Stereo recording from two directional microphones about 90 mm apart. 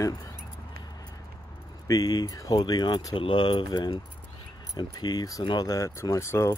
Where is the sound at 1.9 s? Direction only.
45° left (ahead or behind); by 3.6 s 65° left (ahead or behind).